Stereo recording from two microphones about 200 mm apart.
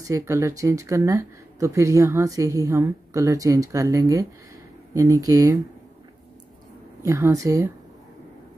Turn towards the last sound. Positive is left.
turn(degrees=-15)  # may be behind; listen again after turning